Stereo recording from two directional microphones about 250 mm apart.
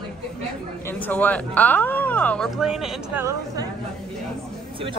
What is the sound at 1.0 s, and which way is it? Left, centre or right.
Speech, centre.